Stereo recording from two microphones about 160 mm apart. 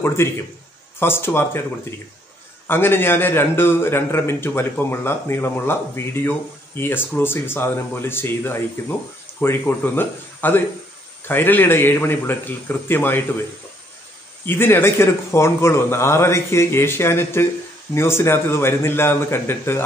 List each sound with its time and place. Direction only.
0.0 s a man's voice: 15° left (ahead or behind)
2.6 s a man's voice: 15° left (ahead or behind)
14.4 s a man's voice: 15° left (ahead or behind)